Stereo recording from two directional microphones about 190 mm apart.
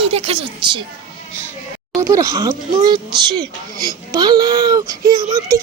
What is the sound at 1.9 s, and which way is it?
Speech, 15° right (ahead or behind).